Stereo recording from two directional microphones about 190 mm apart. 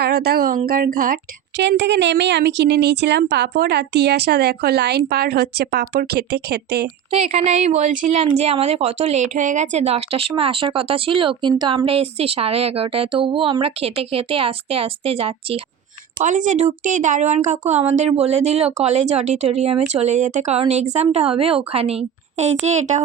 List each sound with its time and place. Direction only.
0.0 s a woman's voice: 55° right (ahead or behind)
7.1 s a woman's voice: 35° right (ahead or behind)
16.2 s a woman's voice: 40° right (ahead or behind)